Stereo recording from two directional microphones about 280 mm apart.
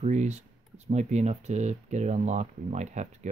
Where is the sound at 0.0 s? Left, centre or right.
Right.